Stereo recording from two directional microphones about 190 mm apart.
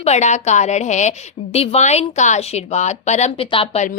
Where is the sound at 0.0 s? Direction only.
35° left (ahead or behind).